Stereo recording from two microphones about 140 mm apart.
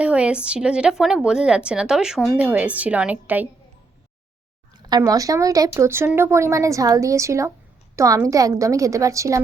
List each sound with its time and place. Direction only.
0.0 s a woman's voice: 10° right (ahead or behind)
4.7 s a woman's voice: 25° right (ahead or behind)